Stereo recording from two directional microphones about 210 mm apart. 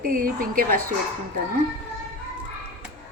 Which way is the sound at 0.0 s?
40° right (ahead or behind).